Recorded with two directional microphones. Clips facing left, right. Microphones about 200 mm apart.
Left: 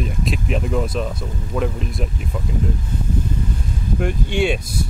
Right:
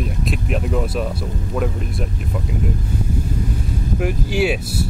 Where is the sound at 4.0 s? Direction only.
5° right (ahead or behind).